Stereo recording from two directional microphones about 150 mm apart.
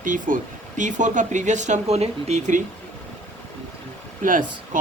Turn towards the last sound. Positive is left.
turn(degrees=-60)  # may be behind; listen again after turning